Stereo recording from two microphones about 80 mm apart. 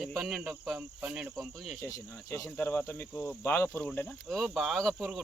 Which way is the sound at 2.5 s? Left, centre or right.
Left.